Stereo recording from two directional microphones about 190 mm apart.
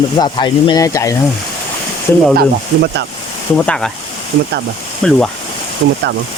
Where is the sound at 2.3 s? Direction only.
60° right (ahead or behind).